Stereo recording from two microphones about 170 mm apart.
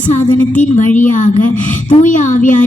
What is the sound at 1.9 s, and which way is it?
Speech, 45° left (ahead or behind).